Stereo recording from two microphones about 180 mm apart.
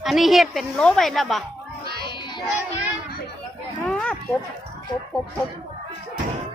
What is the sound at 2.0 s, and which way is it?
Child singing, 25° left (ahead or behind).